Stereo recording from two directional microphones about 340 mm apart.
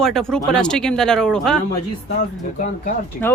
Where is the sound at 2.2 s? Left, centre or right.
Left.